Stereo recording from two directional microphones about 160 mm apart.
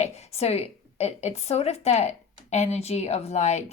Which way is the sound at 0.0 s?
45° left (ahead or behind).